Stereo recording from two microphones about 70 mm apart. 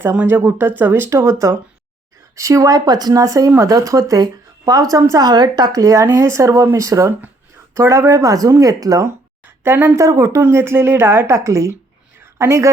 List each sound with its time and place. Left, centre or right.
0.3 s a woman's voice: right
1.1 s speech: right
5.1 s a woman's voice: right
6.1 s speech: right
9.6 s a woman's voice: right
9.9 s speech: right
10.5 s speech: right
11.3 s speech: right